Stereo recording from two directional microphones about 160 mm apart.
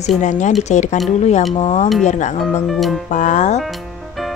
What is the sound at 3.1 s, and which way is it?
Speech, 50° left (ahead or behind).